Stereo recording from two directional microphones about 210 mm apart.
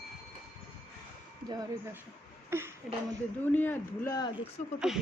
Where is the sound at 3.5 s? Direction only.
10° left (ahead or behind).